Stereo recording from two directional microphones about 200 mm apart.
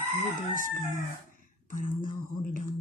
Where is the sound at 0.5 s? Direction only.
40° left (ahead or behind).